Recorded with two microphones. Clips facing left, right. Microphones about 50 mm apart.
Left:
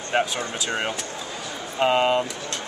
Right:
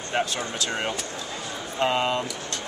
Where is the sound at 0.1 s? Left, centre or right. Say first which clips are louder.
Left 3 dB; left.